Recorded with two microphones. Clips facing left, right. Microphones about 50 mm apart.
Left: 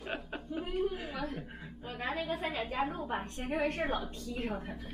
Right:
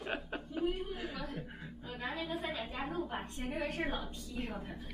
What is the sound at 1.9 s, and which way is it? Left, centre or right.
A woman's voice, left.